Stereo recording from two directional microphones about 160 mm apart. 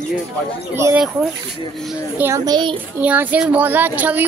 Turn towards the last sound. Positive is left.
turn(degrees=-10)  # may be behind; listen again after turning